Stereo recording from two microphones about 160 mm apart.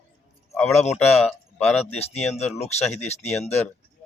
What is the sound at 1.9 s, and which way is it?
Speech, 40° left (ahead or behind).